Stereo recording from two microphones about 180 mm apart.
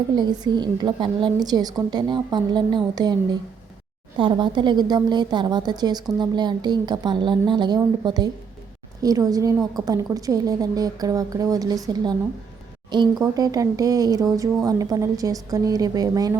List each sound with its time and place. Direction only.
0.2 s a woman's voice: 25° right (ahead or behind)
12.9 s a woman's voice: 25° right (ahead or behind)